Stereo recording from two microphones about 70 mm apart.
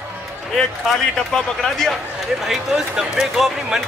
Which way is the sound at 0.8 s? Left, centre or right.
Centre.